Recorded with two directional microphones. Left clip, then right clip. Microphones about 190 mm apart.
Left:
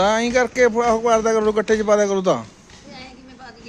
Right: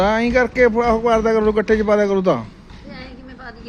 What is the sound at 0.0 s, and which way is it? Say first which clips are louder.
Speech: right 1 dB; 10° left (ahead or behind).